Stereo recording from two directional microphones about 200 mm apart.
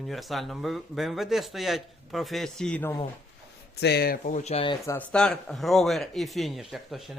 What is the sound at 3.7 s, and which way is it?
Speech, 55° left (ahead or behind).